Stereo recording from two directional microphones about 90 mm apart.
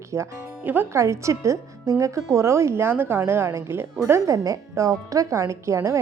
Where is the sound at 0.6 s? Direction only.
20° right (ahead or behind).